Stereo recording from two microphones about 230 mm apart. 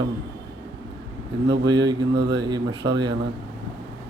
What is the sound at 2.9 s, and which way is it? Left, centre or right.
Speech, centre.